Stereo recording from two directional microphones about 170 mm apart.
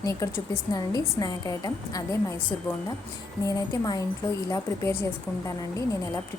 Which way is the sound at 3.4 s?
20° left (ahead or behind).